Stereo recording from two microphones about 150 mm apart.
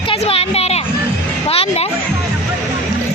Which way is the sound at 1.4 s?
40° left (ahead or behind).